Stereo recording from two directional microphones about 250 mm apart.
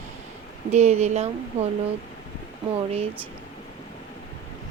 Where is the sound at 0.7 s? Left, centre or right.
Right.